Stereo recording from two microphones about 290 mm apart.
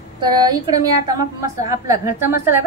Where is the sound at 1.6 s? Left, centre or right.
Centre.